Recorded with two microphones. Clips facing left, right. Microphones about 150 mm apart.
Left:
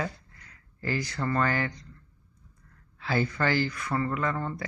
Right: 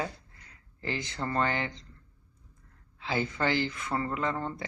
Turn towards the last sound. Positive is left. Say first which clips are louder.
# left 2 dB
turn(degrees=-25)  # may be behind; listen again after turning